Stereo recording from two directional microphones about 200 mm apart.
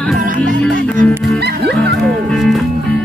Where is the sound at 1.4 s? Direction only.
55° right (ahead or behind).